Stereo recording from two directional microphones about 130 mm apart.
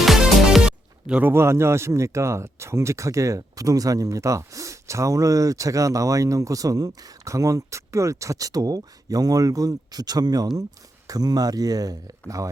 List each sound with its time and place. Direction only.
0.0 s music: 5° right (ahead or behind)
1.3 s speech: 20° right (ahead or behind)